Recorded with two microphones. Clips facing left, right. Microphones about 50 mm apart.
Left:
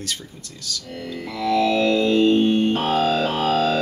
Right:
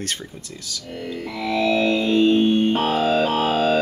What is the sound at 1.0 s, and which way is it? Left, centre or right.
Speech, right.